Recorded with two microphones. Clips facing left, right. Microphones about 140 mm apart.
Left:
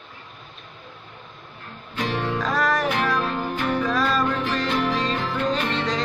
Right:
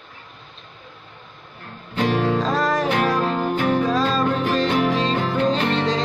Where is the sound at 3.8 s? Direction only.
25° right (ahead or behind).